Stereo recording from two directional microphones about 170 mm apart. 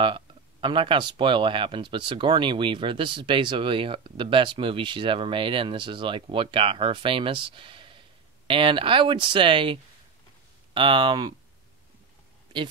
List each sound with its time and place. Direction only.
0.0 s speech: 30° right (ahead or behind)